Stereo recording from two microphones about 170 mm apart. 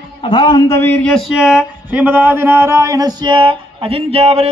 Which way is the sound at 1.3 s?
Centre (ahead or behind).